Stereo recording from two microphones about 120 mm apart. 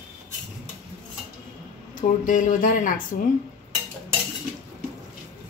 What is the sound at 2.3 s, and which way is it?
Speech, 90° left.